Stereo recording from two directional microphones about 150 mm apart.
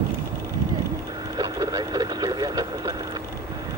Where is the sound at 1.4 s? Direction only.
30° right (ahead or behind).